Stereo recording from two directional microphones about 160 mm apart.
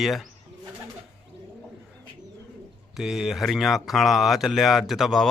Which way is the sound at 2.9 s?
Centre (ahead or behind).